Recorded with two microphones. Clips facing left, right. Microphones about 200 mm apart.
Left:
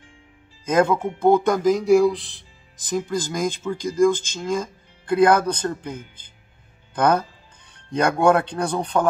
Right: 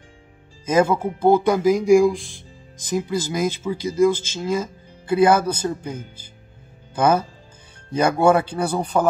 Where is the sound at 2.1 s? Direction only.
45° right (ahead or behind).